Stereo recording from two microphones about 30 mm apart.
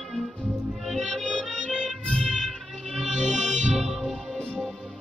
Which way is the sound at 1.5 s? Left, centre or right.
Right.